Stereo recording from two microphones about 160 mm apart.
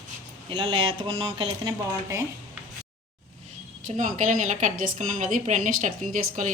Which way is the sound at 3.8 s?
50° right (ahead or behind).